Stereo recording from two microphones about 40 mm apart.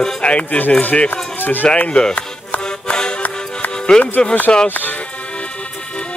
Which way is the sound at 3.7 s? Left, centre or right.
Left.